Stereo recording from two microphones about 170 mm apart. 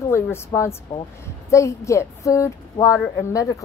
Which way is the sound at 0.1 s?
15° left (ahead or behind).